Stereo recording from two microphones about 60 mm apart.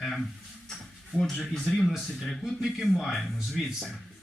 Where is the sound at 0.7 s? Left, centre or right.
Centre.